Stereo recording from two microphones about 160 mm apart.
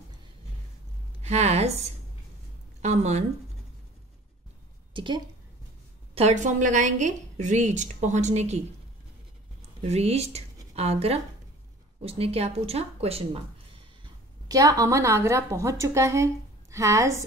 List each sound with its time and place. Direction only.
1.2 s a woman's voice: 45° right (ahead or behind)
4.9 s a woman's voice: 30° right (ahead or behind)
6.1 s a woman's voice: 45° right (ahead or behind)
9.8 s speech: 40° right (ahead or behind)
14.0 s a woman's voice: 20° right (ahead or behind)